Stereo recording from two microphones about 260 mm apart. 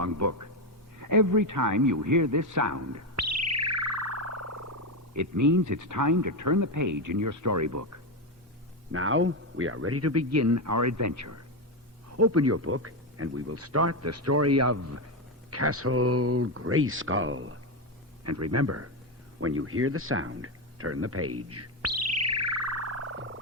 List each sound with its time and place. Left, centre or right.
0.0 s a sound: right
2.0 s bird: right
7.2 s speech: right
8.9 s speech: right
12.1 s speech: right
18.2 s speech: right
19.4 s a sound: right